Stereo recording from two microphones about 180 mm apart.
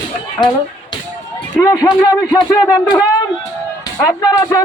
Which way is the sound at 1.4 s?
15° left (ahead or behind).